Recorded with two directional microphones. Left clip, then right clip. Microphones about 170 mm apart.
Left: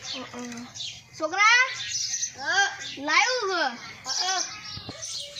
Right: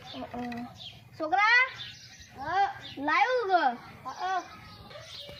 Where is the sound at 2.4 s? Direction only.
70° right (ahead or behind).